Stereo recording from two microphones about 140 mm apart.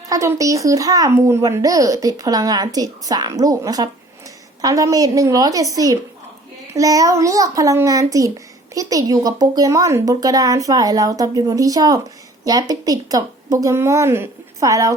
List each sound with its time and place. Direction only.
0.1 s a child's voice: 25° right (ahead or behind)